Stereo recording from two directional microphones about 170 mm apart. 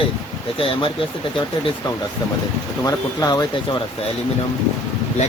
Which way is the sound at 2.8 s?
20° left (ahead or behind).